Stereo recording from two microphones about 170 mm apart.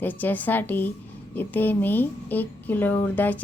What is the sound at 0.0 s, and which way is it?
Speech, 10° left (ahead or behind).